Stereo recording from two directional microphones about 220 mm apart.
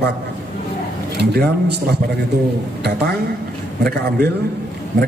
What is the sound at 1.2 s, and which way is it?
Speech, 50° right (ahead or behind).